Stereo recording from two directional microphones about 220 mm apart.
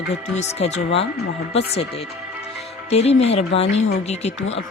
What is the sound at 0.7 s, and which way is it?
Speech, 55° left (ahead or behind).